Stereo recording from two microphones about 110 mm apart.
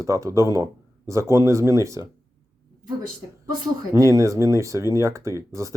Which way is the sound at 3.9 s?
30° right (ahead or behind).